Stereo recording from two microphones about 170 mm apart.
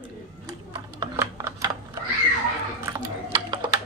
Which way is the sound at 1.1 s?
15° right (ahead or behind).